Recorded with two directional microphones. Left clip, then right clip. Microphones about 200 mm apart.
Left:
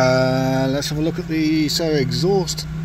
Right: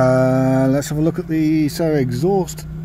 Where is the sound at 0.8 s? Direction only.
45° right (ahead or behind).